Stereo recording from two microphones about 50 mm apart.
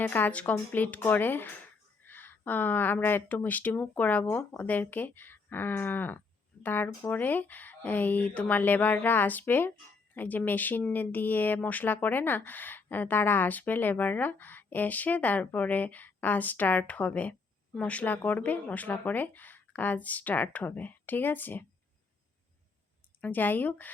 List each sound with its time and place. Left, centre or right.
0.0 s speech: left
23.2 s speech: left